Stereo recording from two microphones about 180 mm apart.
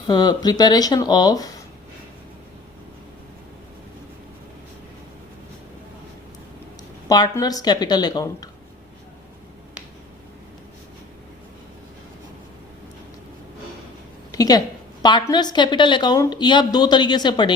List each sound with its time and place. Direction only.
0.1 s a woman's voice: 25° left (ahead or behind)
7.1 s a woman's voice: 20° left (ahead or behind)
14.3 s a woman's voice: 20° left (ahead or behind)